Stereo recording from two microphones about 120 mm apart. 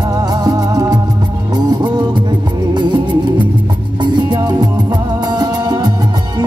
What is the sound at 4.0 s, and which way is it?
Music, 40° right (ahead or behind).